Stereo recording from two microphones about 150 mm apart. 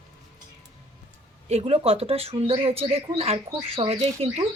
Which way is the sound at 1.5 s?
45° right (ahead or behind).